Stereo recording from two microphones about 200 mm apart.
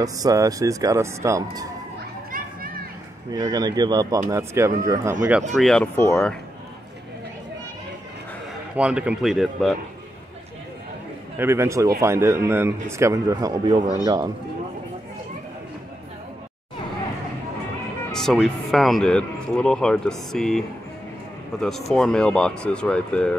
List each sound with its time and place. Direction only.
0.0 s speech: 15° right (ahead or behind)
3.3 s speech: 20° right (ahead or behind)
5.5 s speech: centre (ahead or behind)
8.7 s speech: 5° right (ahead or behind)
11.3 s speech: 10° right (ahead or behind)
18.1 s speech: centre (ahead or behind)